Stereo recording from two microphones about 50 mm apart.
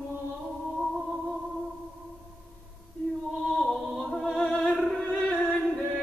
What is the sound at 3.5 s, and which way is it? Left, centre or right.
Music, centre.